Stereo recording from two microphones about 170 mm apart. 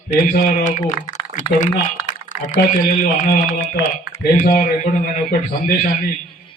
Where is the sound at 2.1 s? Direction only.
50° left (ahead or behind).